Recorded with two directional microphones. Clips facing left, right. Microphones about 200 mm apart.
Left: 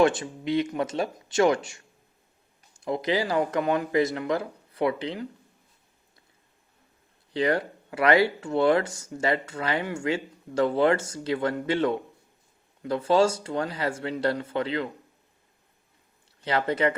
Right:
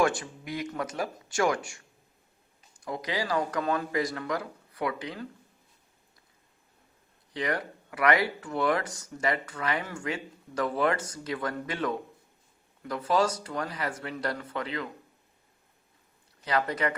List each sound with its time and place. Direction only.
0.0 s speech: 20° left (ahead or behind)
2.8 s speech: 25° left (ahead or behind)
7.3 s speech: 30° left (ahead or behind)
16.4 s speech: 25° left (ahead or behind)